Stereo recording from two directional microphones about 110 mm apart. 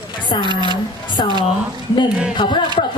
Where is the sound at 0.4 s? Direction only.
45° right (ahead or behind).